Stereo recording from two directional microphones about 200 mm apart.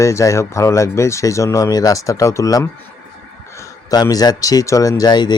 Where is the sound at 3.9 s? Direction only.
20° left (ahead or behind).